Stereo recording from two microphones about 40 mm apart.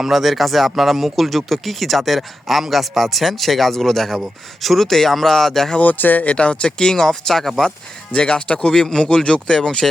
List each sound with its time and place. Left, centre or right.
0.0 s speech: centre
5.8 s speech: left
6.2 s speech: left; by 7.5 s centre
8.1 s speech: left
8.7 s speech: centre